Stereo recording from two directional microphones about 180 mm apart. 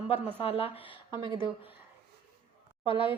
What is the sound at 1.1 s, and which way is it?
Speech, 20° right (ahead or behind).